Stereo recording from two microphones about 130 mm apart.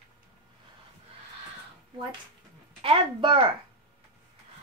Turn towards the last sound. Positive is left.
turn(degrees=-40)  # may be behind; listen again after turning